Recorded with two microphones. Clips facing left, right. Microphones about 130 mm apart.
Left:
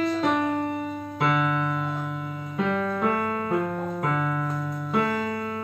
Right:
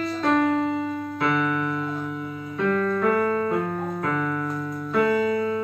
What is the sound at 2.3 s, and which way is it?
Music, 25° left (ahead or behind).